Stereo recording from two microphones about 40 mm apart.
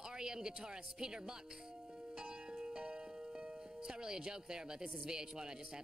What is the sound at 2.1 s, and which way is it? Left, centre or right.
Music, centre.